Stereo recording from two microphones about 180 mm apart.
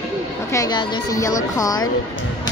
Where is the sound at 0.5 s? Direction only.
20° left (ahead or behind).